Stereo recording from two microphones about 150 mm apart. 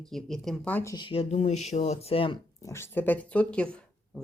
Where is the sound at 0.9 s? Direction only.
35° left (ahead or behind).